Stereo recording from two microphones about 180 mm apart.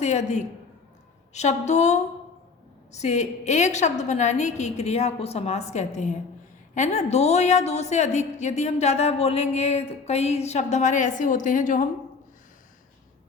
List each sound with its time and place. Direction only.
0.0 s a woman's voice: 40° left (ahead or behind)